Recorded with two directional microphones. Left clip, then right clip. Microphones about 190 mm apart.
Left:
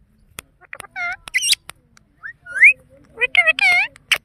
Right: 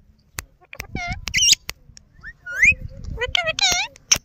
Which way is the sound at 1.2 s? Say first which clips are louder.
Right 3 dB; 35° right (ahead or behind).